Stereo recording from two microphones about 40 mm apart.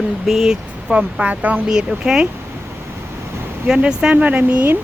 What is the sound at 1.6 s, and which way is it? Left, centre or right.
Speech, centre.